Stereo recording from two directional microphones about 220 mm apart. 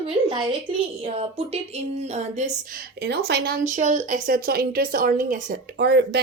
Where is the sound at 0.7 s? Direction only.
25° right (ahead or behind).